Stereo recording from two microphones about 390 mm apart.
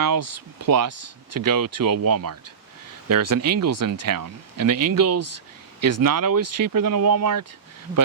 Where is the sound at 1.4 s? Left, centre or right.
Right.